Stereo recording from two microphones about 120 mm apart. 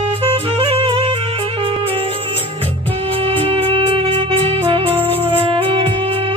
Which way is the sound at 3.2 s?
50° right (ahead or behind).